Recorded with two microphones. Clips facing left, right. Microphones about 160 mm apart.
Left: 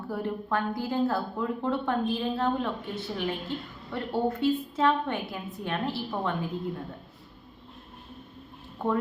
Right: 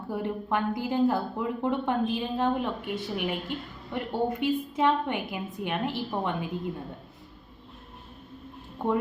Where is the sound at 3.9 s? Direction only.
15° right (ahead or behind).